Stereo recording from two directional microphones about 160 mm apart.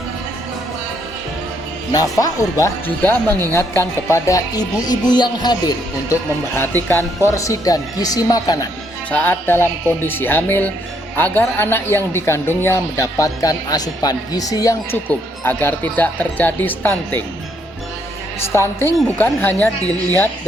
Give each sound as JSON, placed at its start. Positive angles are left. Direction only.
{"t": 1.9, "sound": "speech", "side_deg": 20}
{"t": 9.0, "sound": "speech", "side_deg": 10}
{"t": 15.0, "sound": "speech", "side_deg": 10}
{"t": 18.4, "sound": "speech", "side_deg": 15}